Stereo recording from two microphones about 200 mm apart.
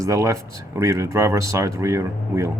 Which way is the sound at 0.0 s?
15° right (ahead or behind).